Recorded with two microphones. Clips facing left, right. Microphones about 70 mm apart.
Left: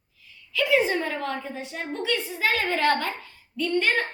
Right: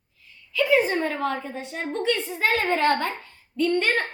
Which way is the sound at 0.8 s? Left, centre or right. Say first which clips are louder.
Right 2 dB; right.